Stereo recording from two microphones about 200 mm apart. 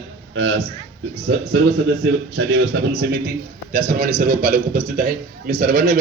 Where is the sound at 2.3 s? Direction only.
65° right (ahead or behind).